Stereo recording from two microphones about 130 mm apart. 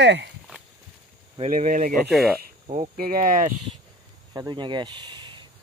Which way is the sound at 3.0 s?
90° right.